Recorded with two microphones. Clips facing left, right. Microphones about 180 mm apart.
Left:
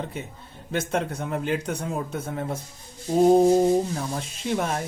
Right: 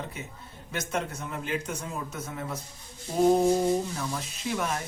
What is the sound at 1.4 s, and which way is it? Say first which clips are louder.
Speech: left 3 dB; 60° left (ahead or behind).